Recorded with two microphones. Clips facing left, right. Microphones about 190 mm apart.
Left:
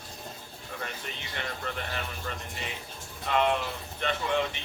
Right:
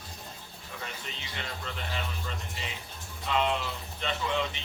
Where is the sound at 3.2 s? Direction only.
55° left (ahead or behind).